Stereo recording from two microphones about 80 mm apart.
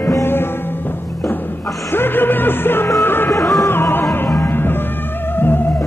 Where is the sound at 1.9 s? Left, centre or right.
Left.